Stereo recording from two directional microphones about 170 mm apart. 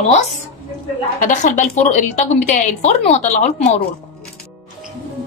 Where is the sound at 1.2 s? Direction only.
50° left (ahead or behind).